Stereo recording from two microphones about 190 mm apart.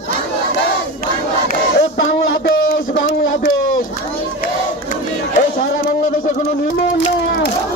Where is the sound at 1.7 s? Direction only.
70° left (ahead or behind).